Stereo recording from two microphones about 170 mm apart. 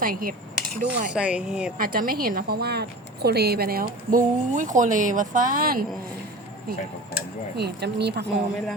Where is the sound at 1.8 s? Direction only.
60° right (ahead or behind).